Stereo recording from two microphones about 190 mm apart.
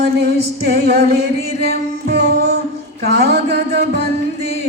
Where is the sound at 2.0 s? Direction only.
60° right (ahead or behind).